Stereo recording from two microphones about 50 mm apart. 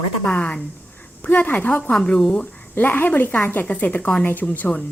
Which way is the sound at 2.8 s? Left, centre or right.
Left.